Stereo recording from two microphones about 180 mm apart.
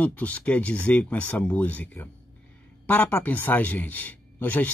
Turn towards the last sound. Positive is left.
turn(degrees=10)  # may be behind; listen again after turning